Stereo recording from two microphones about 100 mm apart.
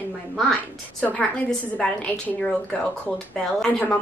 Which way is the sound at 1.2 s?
5° left (ahead or behind).